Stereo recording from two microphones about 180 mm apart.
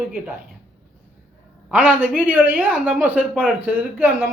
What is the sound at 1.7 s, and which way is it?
A man's voice, 10° right (ahead or behind).